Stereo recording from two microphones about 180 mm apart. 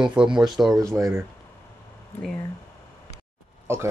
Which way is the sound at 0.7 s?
15° right (ahead or behind).